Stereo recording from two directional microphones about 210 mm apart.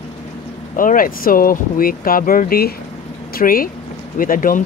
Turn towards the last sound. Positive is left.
turn(degrees=40)  # may be behind; listen again after turning